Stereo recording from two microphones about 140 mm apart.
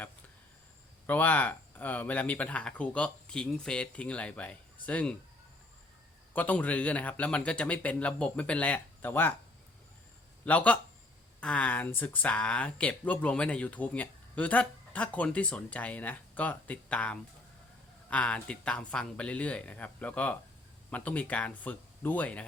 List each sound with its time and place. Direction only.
1.0 s speech: 10° left (ahead or behind)
6.3 s speech: 10° left (ahead or behind)
10.4 s speech: 10° left (ahead or behind)